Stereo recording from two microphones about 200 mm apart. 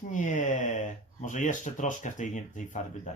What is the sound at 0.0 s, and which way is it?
Speech, 40° left (ahead or behind).